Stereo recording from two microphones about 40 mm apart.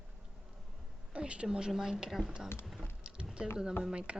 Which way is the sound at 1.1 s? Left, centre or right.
Right.